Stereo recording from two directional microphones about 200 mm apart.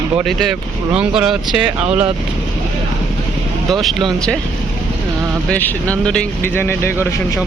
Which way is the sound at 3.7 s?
Centre (ahead or behind).